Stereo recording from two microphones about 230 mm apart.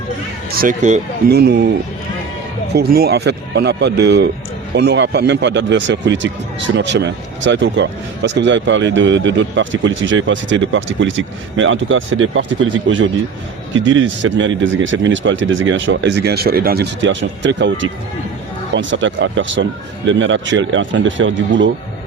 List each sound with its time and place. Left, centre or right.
0.5 s speech: right
1.3 s speech: right
2.7 s speech: right